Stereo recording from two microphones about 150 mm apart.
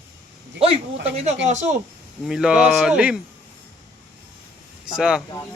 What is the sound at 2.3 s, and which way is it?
Speech, 5° right (ahead or behind).